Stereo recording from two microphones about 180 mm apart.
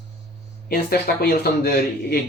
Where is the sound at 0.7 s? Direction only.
60° left (ahead or behind).